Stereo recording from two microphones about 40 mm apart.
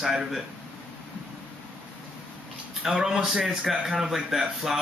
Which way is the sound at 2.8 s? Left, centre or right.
Centre.